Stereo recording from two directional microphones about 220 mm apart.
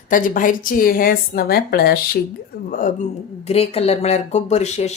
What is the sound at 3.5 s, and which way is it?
Speech, 25° left (ahead or behind).